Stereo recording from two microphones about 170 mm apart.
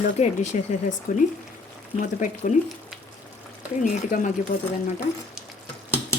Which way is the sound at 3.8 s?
50° left (ahead or behind).